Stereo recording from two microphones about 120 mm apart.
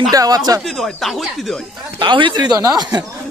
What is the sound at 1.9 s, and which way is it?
A man's voice, 40° right (ahead or behind).